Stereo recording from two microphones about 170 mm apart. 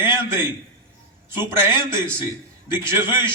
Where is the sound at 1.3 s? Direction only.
30° left (ahead or behind).